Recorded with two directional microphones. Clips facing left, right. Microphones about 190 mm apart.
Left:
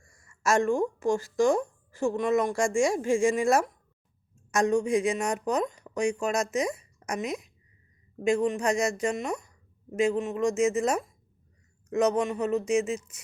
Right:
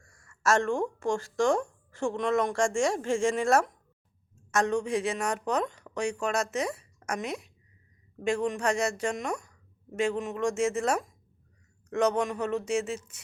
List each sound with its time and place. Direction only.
0.1 s speech: 10° left (ahead or behind)